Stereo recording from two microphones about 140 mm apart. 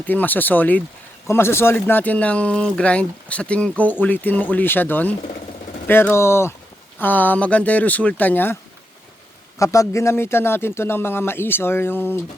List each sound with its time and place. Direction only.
0.0 s speech: 10° left (ahead or behind)
9.6 s speech: 20° left (ahead or behind)